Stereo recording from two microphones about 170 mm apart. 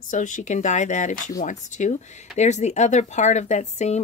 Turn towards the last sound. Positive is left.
turn(degrees=40)  # may be behind; listen again after turning